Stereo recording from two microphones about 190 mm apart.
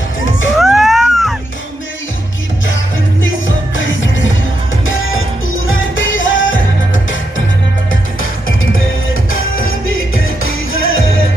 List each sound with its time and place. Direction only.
0.6 s a sound: centre (ahead or behind)
3.7 s music: 90° left
5.8 s music: 90° left
10.2 s music: 90° left